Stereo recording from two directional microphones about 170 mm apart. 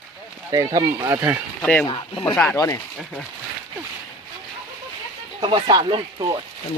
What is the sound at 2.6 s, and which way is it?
Speech, 20° left (ahead or behind).